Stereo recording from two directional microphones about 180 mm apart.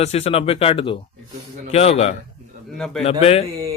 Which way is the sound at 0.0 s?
35° left (ahead or behind).